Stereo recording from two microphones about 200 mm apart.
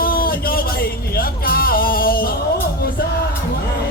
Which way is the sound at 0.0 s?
45° left (ahead or behind).